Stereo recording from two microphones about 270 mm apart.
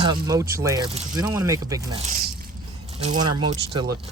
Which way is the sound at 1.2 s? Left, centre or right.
Centre.